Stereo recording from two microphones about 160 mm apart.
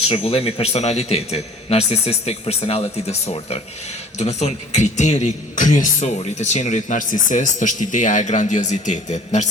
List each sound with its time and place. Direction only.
0.0 s a man's voice: 40° left (ahead or behind)